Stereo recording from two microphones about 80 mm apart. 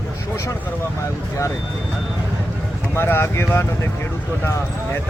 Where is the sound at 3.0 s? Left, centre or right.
Left.